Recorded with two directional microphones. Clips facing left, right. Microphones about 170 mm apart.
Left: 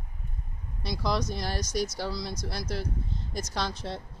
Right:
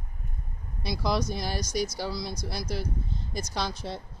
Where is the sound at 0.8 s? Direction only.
5° right (ahead or behind).